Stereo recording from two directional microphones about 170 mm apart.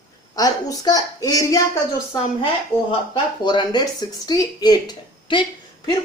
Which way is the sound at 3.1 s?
25° left (ahead or behind).